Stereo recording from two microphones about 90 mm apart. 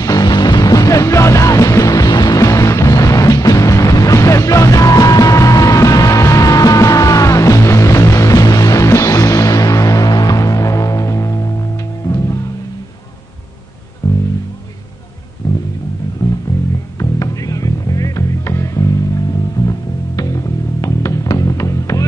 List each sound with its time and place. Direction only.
0.0 s music: 45° left (ahead or behind)
14.0 s music: 35° left (ahead or behind)
17.0 s music: 40° left (ahead or behind)